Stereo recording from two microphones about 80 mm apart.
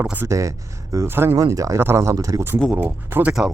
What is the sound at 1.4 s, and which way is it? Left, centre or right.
Speech, right.